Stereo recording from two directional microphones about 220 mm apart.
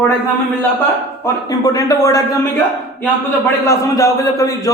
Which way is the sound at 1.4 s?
15° left (ahead or behind).